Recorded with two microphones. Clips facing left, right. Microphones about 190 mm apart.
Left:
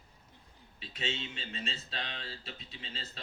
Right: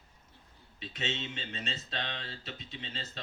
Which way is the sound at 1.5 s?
35° left (ahead or behind).